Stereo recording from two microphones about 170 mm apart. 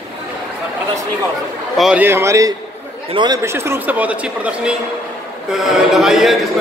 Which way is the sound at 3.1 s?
30° right (ahead or behind).